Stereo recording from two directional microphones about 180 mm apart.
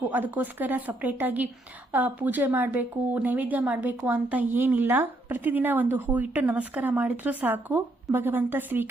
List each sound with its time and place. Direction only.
0.1 s speech: 10° right (ahead or behind)